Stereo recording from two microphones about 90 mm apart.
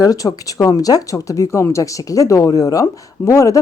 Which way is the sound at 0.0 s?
45° left (ahead or behind).